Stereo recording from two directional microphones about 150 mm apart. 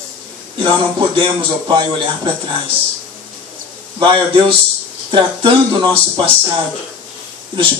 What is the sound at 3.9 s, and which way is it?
A man's voice, 35° right (ahead or behind).